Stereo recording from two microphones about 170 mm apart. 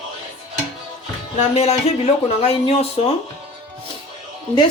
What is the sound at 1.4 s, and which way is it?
Speech, 40° left (ahead or behind).